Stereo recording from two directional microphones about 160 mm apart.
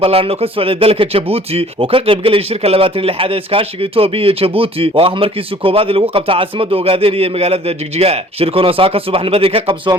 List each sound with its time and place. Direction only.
0.0 s speech: 35° right (ahead or behind)